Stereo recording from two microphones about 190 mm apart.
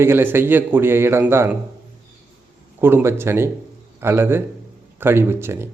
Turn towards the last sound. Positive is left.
turn(degrees=-15)  # may be behind; listen again after turning